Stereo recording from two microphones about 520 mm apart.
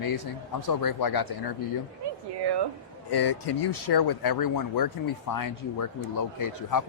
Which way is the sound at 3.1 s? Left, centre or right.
Left.